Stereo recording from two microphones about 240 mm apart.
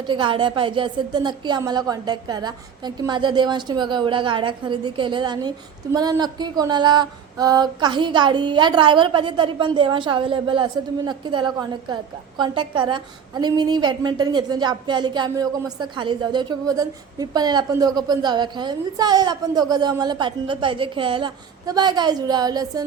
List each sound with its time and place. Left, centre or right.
0.1 s a woman's voice: centre